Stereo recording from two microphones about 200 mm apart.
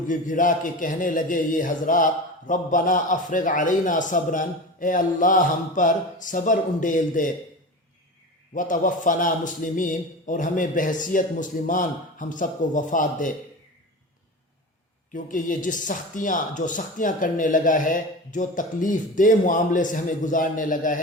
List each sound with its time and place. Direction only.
0.1 s speech: 40° left (ahead or behind)
8.5 s speech: 40° left (ahead or behind)
15.1 s speech: 40° left (ahead or behind)